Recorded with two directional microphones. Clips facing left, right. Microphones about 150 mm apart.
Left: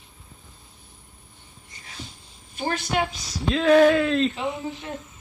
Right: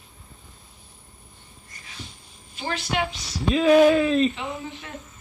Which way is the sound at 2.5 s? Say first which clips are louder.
Left 2 dB; 45° left (ahead or behind).